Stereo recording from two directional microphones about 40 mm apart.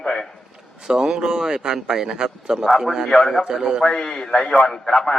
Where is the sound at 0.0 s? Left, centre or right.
Centre.